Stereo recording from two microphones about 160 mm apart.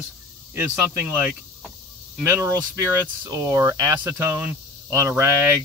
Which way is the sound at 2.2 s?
20° right (ahead or behind).